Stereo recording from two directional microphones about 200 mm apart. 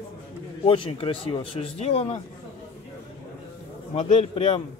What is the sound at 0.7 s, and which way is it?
Speech, 25° left (ahead or behind).